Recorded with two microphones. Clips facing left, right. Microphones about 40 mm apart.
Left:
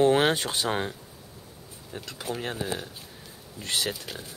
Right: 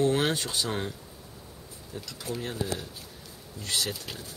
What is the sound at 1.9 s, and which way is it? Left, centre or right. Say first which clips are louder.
Speech: left 2 dB; left.